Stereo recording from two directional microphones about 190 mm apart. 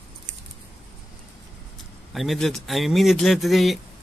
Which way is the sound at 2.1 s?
Centre (ahead or behind).